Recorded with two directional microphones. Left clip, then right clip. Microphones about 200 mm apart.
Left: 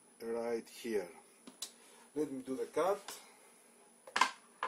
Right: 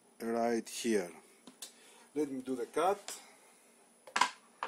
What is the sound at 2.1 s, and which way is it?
Speech, 40° right (ahead or behind).